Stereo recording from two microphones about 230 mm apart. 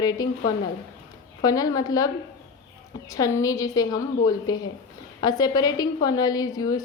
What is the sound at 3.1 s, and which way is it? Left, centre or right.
A woman's voice, centre.